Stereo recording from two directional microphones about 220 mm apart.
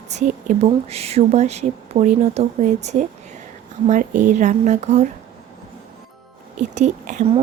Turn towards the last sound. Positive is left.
turn(degrees=-30)  # may be behind; listen again after turning